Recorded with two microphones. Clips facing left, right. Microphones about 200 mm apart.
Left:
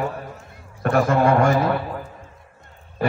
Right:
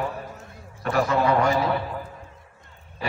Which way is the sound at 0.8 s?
50° left (ahead or behind).